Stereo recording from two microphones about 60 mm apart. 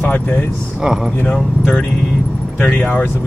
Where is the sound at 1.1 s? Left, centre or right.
Left.